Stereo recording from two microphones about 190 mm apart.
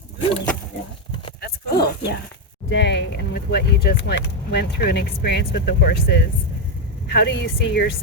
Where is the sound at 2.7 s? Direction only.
65° left (ahead or behind).